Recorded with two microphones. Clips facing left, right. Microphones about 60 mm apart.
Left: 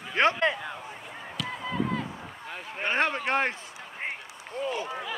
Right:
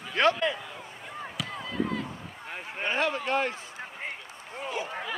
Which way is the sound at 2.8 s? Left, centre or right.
Left.